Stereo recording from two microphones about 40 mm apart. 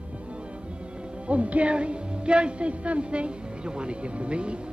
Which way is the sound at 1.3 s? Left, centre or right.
Right.